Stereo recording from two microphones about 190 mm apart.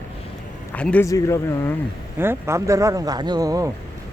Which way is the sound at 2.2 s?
10° right (ahead or behind).